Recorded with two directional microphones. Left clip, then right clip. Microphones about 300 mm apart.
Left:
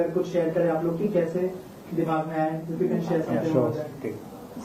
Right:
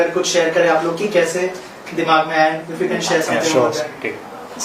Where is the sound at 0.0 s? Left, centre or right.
Centre.